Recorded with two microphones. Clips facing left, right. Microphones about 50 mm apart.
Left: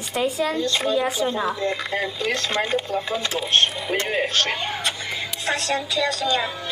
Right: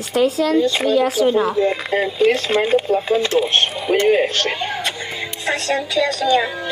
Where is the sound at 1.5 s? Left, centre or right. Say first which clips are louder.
Right 7 dB; centre.